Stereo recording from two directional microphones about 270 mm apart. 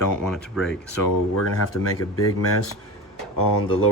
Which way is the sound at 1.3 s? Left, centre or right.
Left.